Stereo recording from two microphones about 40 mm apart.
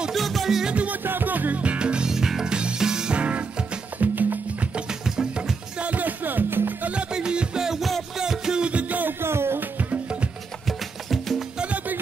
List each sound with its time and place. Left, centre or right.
0.1 s music: centre
1.0 s music: right
1.6 s music: right
3.2 s music: right
4.0 s music: right
5.0 s music: centre
5.8 s music: right
6.9 s music: right
8.6 s music: right
9.2 s music: right
9.6 s music: right
11.1 s music: centre
11.5 s music: right